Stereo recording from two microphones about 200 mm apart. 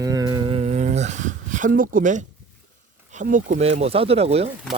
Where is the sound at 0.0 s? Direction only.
15° right (ahead or behind); by 2.2 s 40° right (ahead or behind).